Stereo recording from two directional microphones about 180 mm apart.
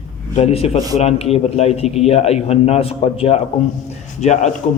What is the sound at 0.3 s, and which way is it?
A man's voice, 35° left (ahead or behind).